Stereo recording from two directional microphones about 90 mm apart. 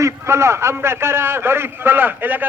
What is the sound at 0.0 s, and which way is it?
A man's voice, 30° right (ahead or behind).